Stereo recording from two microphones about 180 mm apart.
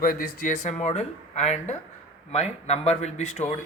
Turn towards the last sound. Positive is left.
turn(degrees=40)  # may be behind; listen again after turning